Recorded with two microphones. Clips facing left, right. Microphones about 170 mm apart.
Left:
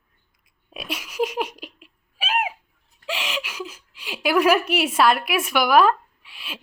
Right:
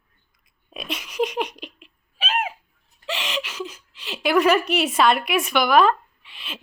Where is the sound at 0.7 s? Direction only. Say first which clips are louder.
Even; 10° left (ahead or behind).